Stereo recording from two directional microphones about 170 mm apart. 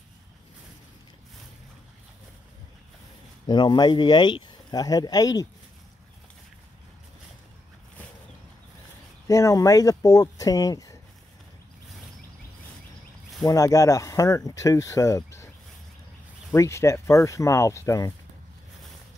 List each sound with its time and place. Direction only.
3.4 s speech: 25° left (ahead or behind)
9.3 s speech: 20° left (ahead or behind)
13.5 s speech: 20° left (ahead or behind)
16.5 s speech: 15° left (ahead or behind)